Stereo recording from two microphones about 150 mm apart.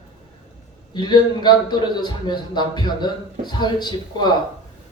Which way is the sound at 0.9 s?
30° left (ahead or behind).